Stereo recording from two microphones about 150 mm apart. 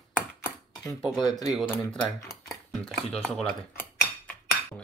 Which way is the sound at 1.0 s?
Centre (ahead or behind).